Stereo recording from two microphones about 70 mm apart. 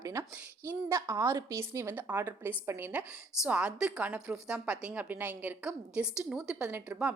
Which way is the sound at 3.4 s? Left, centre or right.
Centre.